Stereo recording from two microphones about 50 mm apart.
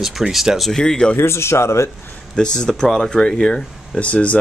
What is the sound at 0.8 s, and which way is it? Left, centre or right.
Speech, centre.